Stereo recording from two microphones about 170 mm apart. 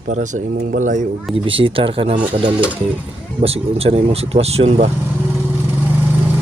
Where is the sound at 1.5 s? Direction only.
30° right (ahead or behind).